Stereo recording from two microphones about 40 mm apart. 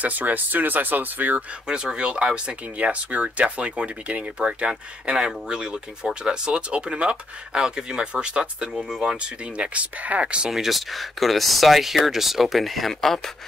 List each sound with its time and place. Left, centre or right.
0.0 s speech: right
1.7 s speech: right
2.8 s speech: right
8.7 s speech: centre
9.0 s speech: right
9.9 s speech: right
10.5 s speech: centre